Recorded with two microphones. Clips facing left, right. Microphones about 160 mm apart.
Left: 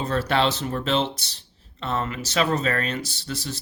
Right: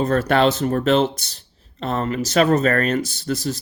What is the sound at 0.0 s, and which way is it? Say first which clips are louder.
Speech: right 6 dB; 50° right (ahead or behind).